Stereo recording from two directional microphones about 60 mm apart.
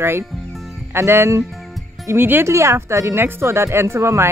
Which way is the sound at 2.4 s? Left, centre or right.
Right.